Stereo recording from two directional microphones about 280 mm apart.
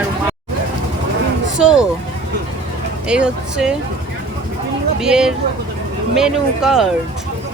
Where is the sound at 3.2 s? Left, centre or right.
Centre.